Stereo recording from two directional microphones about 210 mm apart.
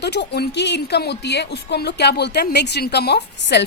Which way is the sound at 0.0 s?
55° left (ahead or behind).